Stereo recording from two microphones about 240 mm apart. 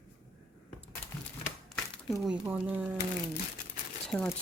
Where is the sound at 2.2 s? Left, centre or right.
Centre.